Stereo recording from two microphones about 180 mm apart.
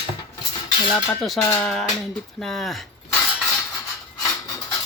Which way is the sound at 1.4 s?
10° left (ahead or behind).